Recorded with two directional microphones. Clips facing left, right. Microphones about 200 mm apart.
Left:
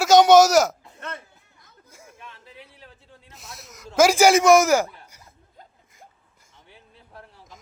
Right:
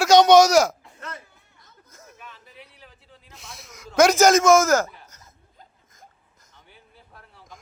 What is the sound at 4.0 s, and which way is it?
A man's voice, 10° left (ahead or behind).